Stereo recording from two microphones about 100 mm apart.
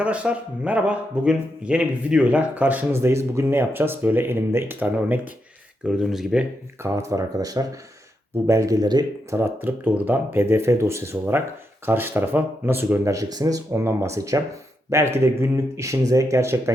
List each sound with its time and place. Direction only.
0.0 s speech: 10° right (ahead or behind)
5.8 s speech: 5° right (ahead or behind)
6.8 s speech: 30° right (ahead or behind)
9.3 s speech: 20° right (ahead or behind)
13.1 s speech: 35° right (ahead or behind)